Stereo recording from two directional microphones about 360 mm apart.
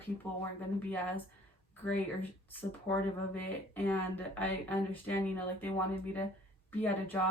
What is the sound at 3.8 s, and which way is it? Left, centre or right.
Speech, centre.